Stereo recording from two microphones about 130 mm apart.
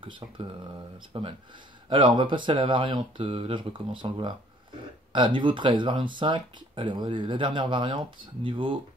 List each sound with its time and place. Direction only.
0.0 s speech: 40° right (ahead or behind)